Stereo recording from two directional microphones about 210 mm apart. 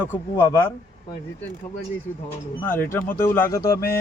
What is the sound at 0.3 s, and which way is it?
Speech, 15° left (ahead or behind).